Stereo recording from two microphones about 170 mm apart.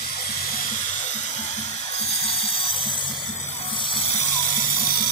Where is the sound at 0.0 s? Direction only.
45° left (ahead or behind); by 4.0 s 30° left (ahead or behind).